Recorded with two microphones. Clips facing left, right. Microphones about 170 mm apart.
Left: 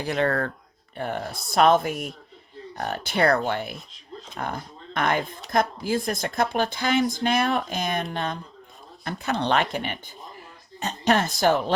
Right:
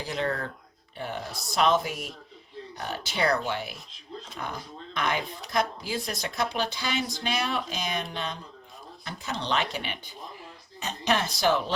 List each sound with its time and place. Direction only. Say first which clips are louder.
0.0 s speech: left 6 dB; 60° left (ahead or behind)